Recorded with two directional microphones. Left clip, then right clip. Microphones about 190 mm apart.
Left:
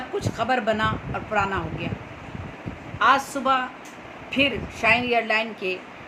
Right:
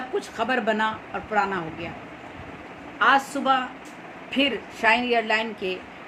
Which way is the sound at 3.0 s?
5° right (ahead or behind).